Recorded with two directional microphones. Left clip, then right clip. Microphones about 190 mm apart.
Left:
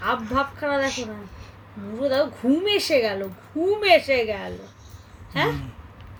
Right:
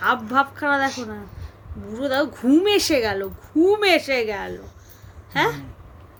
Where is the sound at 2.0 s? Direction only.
60° right (ahead or behind).